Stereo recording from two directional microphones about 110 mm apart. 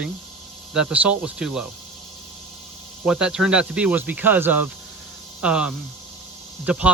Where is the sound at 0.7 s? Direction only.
5° right (ahead or behind).